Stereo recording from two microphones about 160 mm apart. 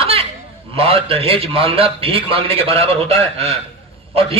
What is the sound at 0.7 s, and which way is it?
A man's voice, 35° right (ahead or behind).